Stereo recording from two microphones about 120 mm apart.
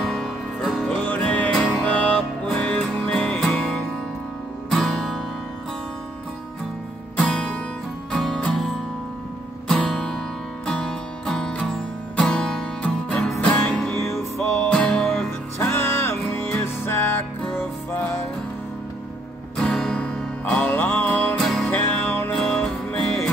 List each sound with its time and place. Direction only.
0.0 s music: centre (ahead or behind)
1.0 s music: 10° left (ahead or behind)
7.2 s guitar: 5° left (ahead or behind)
8.1 s music: 5° left (ahead or behind)
9.7 s music: 5° left (ahead or behind)
15.6 s music: 20° left (ahead or behind)
19.5 s music: 5° left (ahead or behind)
21.4 s music: centre (ahead or behind)
21.9 s music: 15° left (ahead or behind)
22.4 s music: 5° left (ahead or behind)